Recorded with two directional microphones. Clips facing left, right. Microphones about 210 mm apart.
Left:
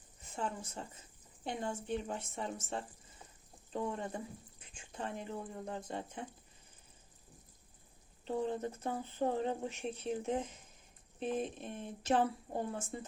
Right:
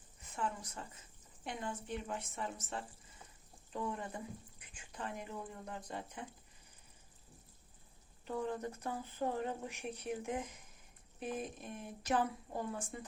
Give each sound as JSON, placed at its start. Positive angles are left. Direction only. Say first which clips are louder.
{"t": 0.3, "sound": "speech", "louder": "left 1 dB", "side_deg": 30}
{"t": 8.2, "sound": "speech", "louder": "left 3 dB", "side_deg": 25}